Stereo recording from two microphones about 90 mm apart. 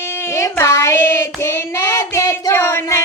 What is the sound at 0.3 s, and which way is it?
Child singing, 30° left (ahead or behind).